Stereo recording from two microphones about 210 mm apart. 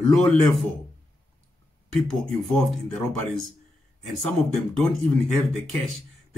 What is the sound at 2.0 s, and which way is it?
Speech, centre (ahead or behind).